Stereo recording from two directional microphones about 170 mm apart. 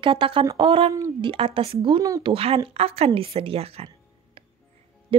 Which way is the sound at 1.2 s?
30° right (ahead or behind).